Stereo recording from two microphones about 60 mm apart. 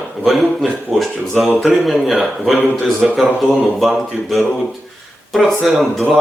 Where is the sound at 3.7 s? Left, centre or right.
Centre.